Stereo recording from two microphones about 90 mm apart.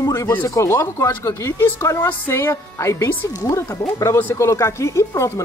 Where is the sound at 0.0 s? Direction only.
40° left (ahead or behind).